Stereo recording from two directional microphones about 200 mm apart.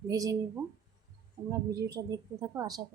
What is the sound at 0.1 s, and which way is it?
A woman's voice, 15° right (ahead or behind).